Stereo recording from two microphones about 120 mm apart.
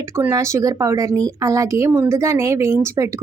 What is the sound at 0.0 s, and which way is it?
A woman's voice, 25° right (ahead or behind).